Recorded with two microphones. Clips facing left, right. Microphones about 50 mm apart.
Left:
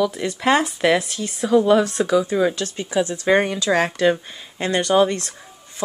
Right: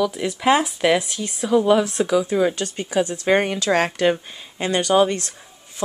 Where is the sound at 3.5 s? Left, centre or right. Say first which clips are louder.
Even; right.